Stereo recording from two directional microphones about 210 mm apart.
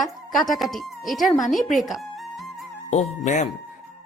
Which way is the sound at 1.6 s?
Centre (ahead or behind).